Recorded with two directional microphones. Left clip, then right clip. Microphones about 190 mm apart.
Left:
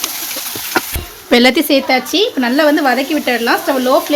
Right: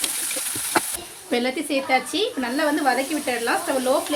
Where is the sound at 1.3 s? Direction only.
50° left (ahead or behind).